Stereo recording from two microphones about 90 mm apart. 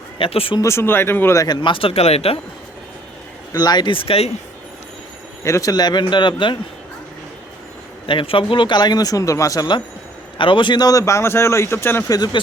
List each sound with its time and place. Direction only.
0.2 s speech: 90° left
0.6 s speech: 30° left (ahead or behind)
1.6 s speech: 80° left
3.5 s speech: 50° left (ahead or behind)
3.9 s speech: 90° left
5.4 s speech: 35° left (ahead or behind); by 6.6 s 60° left (ahead or behind)
8.0 s speech: 70° left (ahead or behind); by 9.6 s 40° left (ahead or behind)
10.3 s a man's voice: 70° left (ahead or behind); by 12.0 s 25° left (ahead or behind)
12.0 s speech: 45° left (ahead or behind)